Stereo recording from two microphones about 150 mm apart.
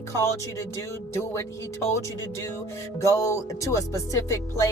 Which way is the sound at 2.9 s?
20° left (ahead or behind).